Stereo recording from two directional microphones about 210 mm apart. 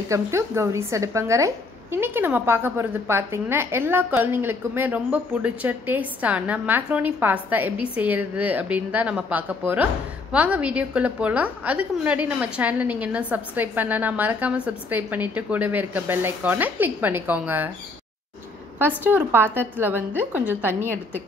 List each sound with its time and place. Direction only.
0.1 s a woman's voice: 15° right (ahead or behind)
18.8 s a woman's voice: 10° right (ahead or behind)